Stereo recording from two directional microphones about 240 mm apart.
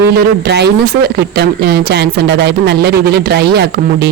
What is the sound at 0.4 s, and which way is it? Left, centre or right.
A woman's voice, right.